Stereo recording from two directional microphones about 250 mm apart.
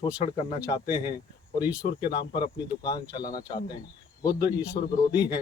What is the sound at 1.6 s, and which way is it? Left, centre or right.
Speech, centre.